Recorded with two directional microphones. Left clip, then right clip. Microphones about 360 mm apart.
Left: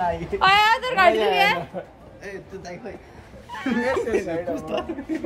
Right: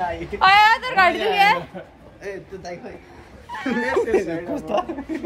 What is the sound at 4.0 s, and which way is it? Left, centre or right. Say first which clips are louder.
Speech: right 3 dB; centre.